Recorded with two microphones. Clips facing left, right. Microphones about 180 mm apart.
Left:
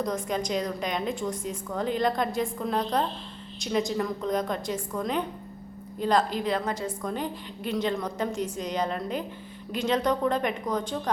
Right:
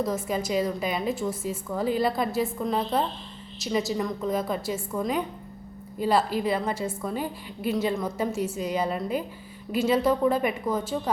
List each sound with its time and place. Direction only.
0.0 s a woman's voice: 5° right (ahead or behind)